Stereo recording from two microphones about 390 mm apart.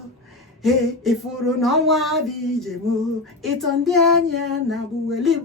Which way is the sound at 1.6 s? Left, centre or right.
Centre.